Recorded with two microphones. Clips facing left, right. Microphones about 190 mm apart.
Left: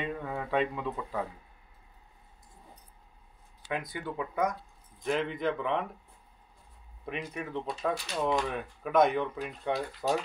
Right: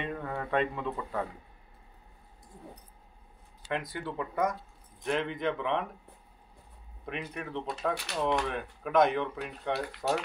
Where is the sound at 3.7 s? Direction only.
Centre (ahead or behind).